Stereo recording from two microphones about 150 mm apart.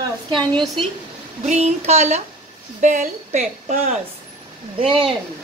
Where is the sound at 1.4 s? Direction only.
50° right (ahead or behind).